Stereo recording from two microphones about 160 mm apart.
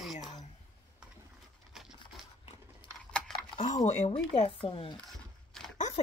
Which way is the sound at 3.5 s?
45° left (ahead or behind).